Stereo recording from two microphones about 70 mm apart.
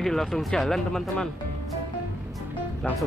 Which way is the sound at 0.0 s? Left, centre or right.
Centre.